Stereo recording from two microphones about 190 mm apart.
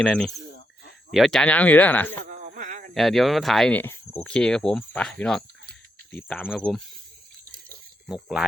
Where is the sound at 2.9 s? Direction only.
Centre (ahead or behind).